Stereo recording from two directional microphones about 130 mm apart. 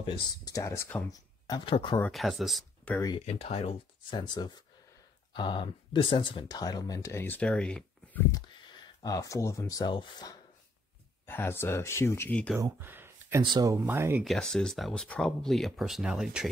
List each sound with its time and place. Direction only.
0.5 s speech: 25° left (ahead or behind)
1.7 s speech: 40° left (ahead or behind)
2.0 s speech: centre (ahead or behind)
3.2 s speech: 60° left (ahead or behind)
4.1 s speech: 35° left (ahead or behind); by 8.2 s 10° left (ahead or behind)
9.0 s speech: 25° left (ahead or behind)
11.2 s speech: 15° left (ahead or behind)
12.5 s a sound: 20° right (ahead or behind)
13.4 s speech: 30° right (ahead or behind)
13.8 s speech: 15° right (ahead or behind)
14.2 s speech: 5° left (ahead or behind)